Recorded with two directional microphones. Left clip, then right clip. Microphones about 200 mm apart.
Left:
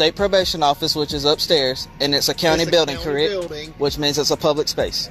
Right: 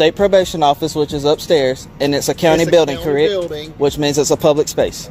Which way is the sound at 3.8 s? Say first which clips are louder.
Right 4 dB; 10° right (ahead or behind).